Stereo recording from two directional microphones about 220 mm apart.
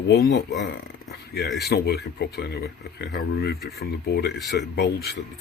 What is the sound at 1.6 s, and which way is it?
Speech, 50° left (ahead or behind).